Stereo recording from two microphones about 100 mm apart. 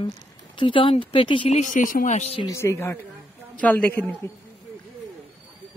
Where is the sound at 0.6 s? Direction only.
60° left (ahead or behind).